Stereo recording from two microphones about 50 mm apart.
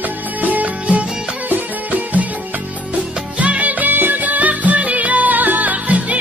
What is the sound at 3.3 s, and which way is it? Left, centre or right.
Music, right.